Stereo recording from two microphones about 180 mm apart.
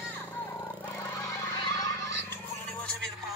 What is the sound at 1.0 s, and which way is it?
Goose, 15° left (ahead or behind).